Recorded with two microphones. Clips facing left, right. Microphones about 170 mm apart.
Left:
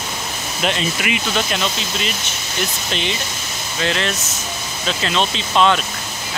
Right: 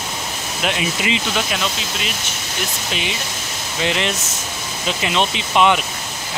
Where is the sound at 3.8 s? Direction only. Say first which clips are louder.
Even; 15° right (ahead or behind).